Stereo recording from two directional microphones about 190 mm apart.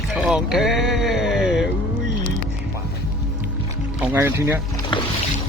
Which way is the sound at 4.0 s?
10° right (ahead or behind).